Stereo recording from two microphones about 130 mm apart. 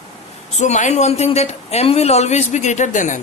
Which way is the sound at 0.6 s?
65° left (ahead or behind).